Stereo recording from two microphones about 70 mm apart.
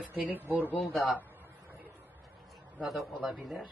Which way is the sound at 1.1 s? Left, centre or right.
Right.